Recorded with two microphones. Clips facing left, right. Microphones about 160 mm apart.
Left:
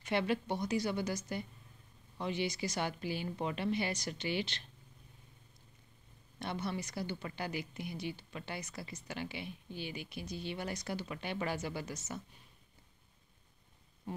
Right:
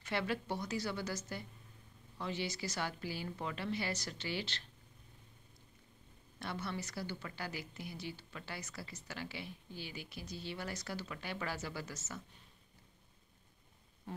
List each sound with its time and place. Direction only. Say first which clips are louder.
0.0 s a woman's voice: left 4 dB; 20° left (ahead or behind)
6.4 s a woman's voice: left 3 dB; 20° left (ahead or behind)